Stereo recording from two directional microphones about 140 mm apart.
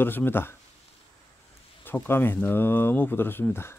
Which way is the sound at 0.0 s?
15° left (ahead or behind).